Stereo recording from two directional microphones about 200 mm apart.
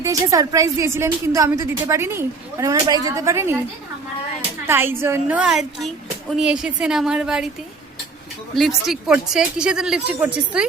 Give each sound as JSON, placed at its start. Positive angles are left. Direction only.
{"t": 0.0, "sound": "a woman's voice", "side_deg": -15}
{"t": 4.6, "sound": "a woman's voice", "side_deg": -10}
{"t": 8.5, "sound": "speech", "side_deg": 0}